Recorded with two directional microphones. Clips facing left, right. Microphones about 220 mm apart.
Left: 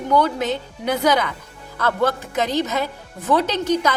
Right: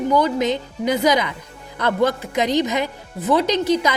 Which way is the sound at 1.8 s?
15° right (ahead or behind).